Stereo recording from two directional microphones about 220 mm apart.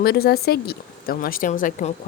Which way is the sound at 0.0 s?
45° left (ahead or behind).